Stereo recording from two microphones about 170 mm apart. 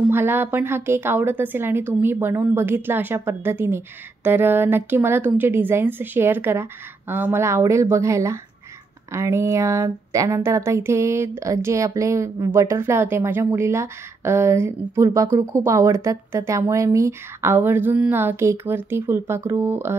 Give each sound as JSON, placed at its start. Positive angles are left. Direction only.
{"t": 0.1, "sound": "a woman's voice", "side_deg": -10}